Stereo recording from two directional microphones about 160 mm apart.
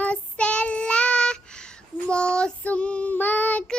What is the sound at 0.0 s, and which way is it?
Child singing, 10° left (ahead or behind).